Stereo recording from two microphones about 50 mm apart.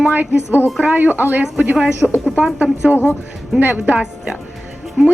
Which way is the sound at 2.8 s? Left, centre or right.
Right.